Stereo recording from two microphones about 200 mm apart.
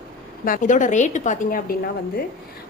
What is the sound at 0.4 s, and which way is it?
A woman's voice, 40° left (ahead or behind).